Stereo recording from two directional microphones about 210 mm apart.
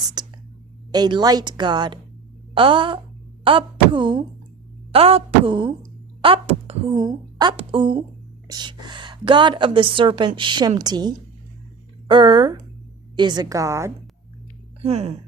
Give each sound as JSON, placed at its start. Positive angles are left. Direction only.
{"t": 0.2, "sound": "whispering", "side_deg": -20}
{"t": 0.9, "sound": "a woman's voice", "side_deg": -20}
{"t": 14.8, "sound": "speech", "side_deg": -30}